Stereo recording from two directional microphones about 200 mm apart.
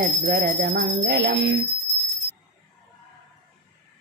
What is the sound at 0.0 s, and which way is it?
Jingle bell, 50° right (ahead or behind).